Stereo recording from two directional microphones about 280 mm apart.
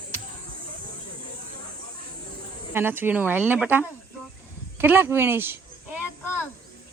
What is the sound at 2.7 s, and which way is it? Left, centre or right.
Speech, centre.